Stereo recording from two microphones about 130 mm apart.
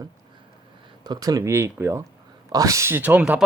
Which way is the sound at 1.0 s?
30° right (ahead or behind).